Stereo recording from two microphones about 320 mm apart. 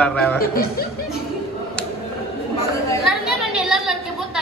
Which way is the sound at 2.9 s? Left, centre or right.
Centre.